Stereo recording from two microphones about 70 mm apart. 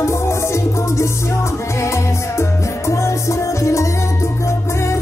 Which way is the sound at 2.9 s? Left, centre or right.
Left.